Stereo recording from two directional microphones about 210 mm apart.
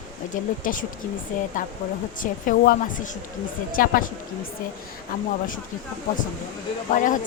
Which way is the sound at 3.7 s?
45° left (ahead or behind).